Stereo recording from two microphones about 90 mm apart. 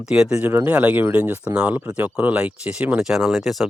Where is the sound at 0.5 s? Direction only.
20° right (ahead or behind); by 3.7 s centre (ahead or behind).